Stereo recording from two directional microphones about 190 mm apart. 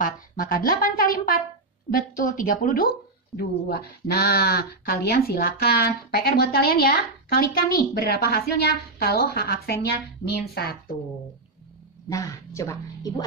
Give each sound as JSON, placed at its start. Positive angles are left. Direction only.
{"t": 0.0, "sound": "speech", "side_deg": 50}
{"t": 12.1, "sound": "a woman's voice", "side_deg": 15}